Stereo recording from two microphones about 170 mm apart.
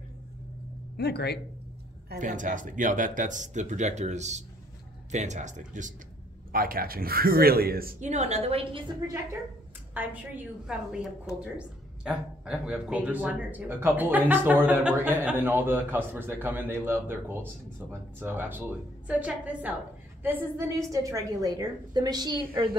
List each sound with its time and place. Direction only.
0.9 s speech: 70° left (ahead or behind)
2.1 s speech: 50° right (ahead or behind)
6.5 s a man's voice: 60° right (ahead or behind)
8.0 s a woman's voice: 40° right (ahead or behind); by 22.5 s 25° right (ahead or behind)